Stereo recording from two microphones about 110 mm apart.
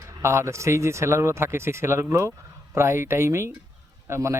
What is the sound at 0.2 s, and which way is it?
Speech, 25° right (ahead or behind).